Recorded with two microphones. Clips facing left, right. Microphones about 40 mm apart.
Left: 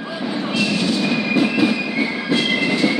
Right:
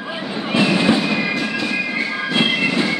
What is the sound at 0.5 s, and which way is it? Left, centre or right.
Fireworks, right.